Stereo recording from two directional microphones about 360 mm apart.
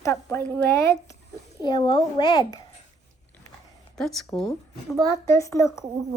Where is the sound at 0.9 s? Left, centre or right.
Centre.